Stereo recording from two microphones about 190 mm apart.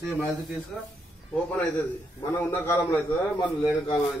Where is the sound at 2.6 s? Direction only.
15° left (ahead or behind).